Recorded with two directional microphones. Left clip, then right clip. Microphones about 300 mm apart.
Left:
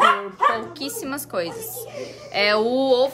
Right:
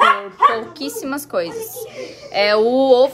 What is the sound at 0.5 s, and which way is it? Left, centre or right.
Speech, centre.